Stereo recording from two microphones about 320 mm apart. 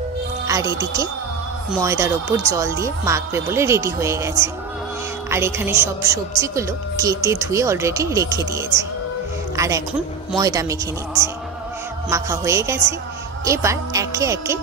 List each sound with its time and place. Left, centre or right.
0.5 s a woman's voice: centre